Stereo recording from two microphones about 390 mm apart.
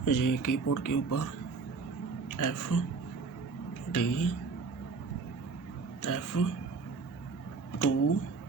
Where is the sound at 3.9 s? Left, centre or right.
Left.